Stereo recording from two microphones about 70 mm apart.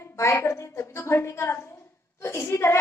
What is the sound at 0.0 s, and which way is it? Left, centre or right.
A woman's voice, left.